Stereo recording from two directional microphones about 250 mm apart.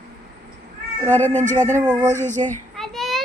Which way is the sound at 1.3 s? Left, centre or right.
Right.